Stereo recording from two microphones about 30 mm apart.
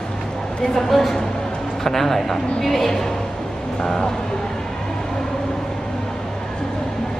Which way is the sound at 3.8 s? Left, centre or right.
Left.